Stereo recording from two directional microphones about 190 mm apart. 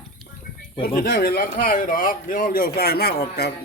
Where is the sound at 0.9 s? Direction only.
55° left (ahead or behind).